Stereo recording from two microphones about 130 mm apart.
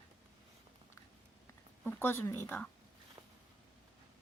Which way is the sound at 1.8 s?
15° left (ahead or behind).